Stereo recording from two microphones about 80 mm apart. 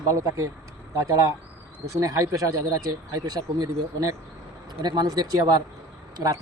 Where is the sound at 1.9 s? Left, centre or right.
Right.